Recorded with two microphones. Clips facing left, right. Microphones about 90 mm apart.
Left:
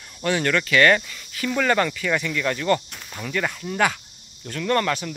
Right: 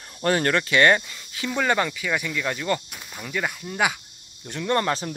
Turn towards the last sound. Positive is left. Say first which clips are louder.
# left 1 dB
turn(degrees=-30)  # may be behind; listen again after turning